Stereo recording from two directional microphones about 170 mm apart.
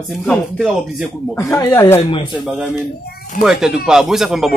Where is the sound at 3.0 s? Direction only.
55° left (ahead or behind).